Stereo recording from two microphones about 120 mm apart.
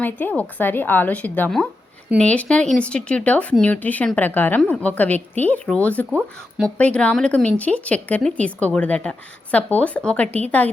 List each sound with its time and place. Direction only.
0.0 s a woman's voice: 15° left (ahead or behind)